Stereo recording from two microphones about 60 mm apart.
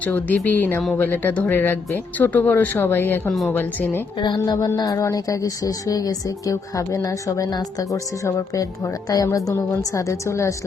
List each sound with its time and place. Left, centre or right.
0.0 s speech: left
1.5 s speech: left
3.2 s speech: centre
3.5 s speech: left
4.4 s speech: left
4.7 s speech: left